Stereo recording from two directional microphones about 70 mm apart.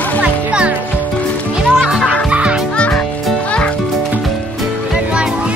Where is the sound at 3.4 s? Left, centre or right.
Centre.